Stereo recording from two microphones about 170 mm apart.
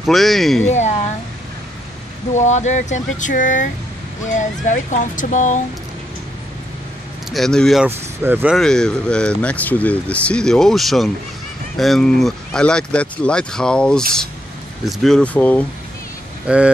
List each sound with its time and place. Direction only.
0.0 s speech: centre (ahead or behind)
0.7 s speech: 45° left (ahead or behind)
2.3 s speech: 45° left (ahead or behind)
7.2 s speech: centre (ahead or behind)
8.2 s speech: 10° right (ahead or behind)
8.5 s speech: 5° left (ahead or behind)
16.4 s speech: 5° right (ahead or behind)